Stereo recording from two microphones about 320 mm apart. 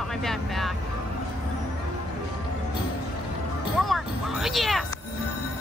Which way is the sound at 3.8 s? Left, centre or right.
Centre.